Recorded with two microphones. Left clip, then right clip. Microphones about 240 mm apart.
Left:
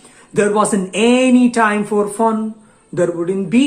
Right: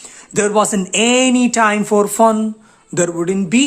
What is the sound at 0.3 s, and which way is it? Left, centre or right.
Speech, right.